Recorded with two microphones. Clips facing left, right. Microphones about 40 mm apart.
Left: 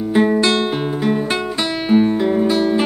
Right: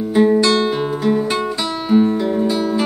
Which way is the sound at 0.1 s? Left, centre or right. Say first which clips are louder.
Right 2 dB; left.